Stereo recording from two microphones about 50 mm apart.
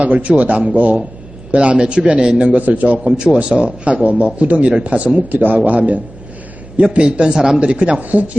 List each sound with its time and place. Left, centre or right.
0.1 s a man's voice: right
2.4 s a man's voice: right
3.1 s a man's voice: centre